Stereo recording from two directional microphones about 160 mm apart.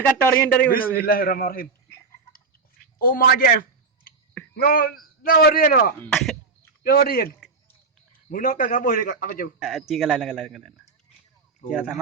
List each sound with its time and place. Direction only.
0.0 s a man's voice: 10° left (ahead or behind)
0.9 s a man's voice: 65° left (ahead or behind)
3.0 s a man's voice: 60° left (ahead or behind)
6.0 s a man's voice: 5° left (ahead or behind)
6.8 s a man's voice: 65° left (ahead or behind)
9.6 s a man's voice: 5° right (ahead or behind)